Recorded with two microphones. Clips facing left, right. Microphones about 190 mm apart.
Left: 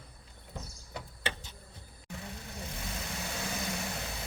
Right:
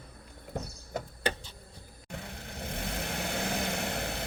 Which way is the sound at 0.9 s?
40° right (ahead or behind).